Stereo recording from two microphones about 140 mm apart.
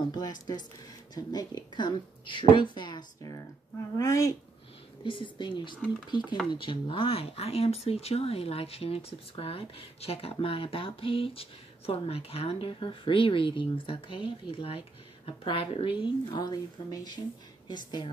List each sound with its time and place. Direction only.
0.1 s speech: 30° left (ahead or behind)
5.0 s speech: 35° left (ahead or behind)